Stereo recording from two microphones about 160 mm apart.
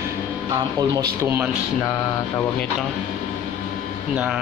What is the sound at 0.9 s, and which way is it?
Speech, 15° right (ahead or behind).